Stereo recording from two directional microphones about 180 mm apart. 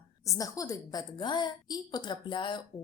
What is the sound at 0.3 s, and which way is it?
A woman's voice, 20° left (ahead or behind).